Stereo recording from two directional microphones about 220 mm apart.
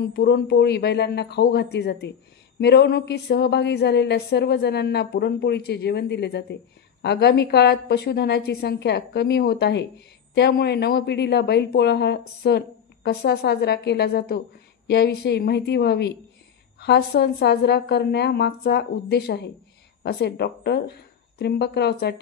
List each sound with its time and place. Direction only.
0.1 s a woman's voice: 45° left (ahead or behind)